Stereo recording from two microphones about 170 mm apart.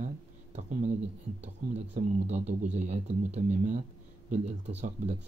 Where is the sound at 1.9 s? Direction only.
40° right (ahead or behind).